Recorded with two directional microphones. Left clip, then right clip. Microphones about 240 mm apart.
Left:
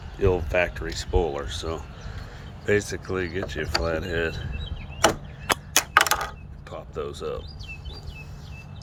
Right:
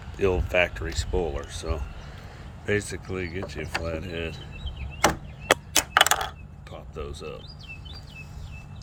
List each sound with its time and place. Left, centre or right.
0.2 s speech: centre
5.7 s a sound: centre
6.7 s speech: centre